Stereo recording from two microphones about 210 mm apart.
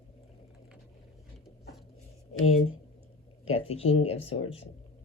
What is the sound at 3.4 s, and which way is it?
Speech, 30° left (ahead or behind).